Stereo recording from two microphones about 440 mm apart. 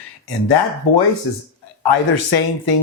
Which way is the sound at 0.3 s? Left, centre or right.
Left.